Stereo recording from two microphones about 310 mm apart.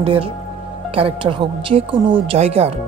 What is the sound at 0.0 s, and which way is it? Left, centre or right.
Speech, centre.